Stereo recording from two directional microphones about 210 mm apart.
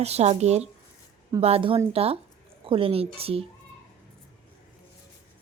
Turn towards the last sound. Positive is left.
turn(degrees=-25)  # may be behind; listen again after turning